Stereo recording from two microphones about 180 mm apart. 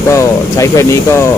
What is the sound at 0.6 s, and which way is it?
Speech, 15° left (ahead or behind).